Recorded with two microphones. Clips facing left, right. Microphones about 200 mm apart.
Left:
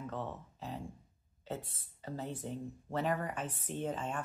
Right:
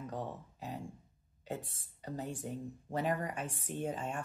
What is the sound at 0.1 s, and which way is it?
Speech, 15° right (ahead or behind).